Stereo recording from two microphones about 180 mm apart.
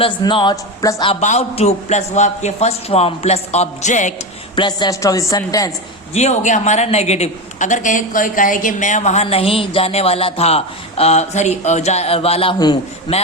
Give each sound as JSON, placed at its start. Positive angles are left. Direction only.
{"t": 0.0, "sound": "speech", "side_deg": 25}
{"t": 1.2, "sound": "a woman's voice", "side_deg": 40}
{"t": 4.5, "sound": "speech", "side_deg": 25}
{"t": 6.1, "sound": "a woman's voice", "side_deg": 40}